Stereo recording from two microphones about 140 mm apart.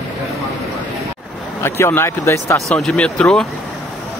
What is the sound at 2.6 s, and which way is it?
Speech, centre (ahead or behind).